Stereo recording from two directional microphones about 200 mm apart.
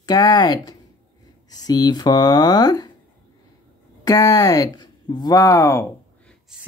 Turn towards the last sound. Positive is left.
turn(degrees=15)  # may be behind; listen again after turning